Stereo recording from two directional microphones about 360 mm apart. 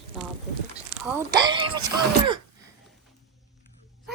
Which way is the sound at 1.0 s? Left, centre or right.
Centre.